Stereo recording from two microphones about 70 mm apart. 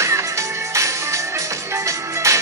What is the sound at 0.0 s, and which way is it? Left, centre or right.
Music, right.